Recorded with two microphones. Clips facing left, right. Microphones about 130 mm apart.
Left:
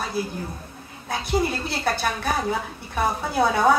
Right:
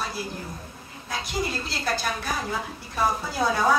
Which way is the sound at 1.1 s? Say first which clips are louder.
Left 6 dB; 60° left (ahead or behind).